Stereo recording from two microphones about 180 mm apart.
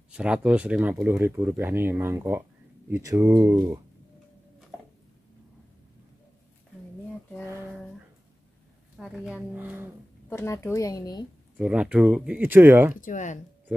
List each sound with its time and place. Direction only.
0.1 s speech: 5° right (ahead or behind)
8.9 s speech: 5° right (ahead or behind)
10.3 s a woman's voice: 15° left (ahead or behind)
11.5 s speech: 5° right (ahead or behind)
13.0 s speech: 45° left (ahead or behind)